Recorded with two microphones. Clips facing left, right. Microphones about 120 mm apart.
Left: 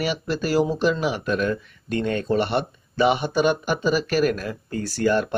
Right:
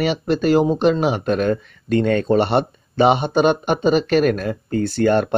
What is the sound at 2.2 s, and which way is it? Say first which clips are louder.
Speech: right 5 dB; 30° right (ahead or behind).